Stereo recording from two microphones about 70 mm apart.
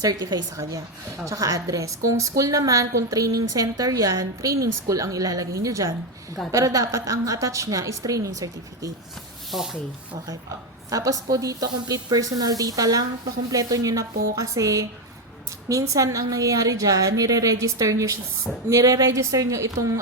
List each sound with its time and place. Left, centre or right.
0.0 s a woman's voice: right
3.9 s a woman's voice: right
9.5 s speech: centre
10.8 s a woman's voice: right